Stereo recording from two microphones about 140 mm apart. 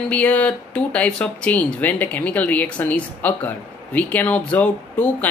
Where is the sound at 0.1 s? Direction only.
10° left (ahead or behind).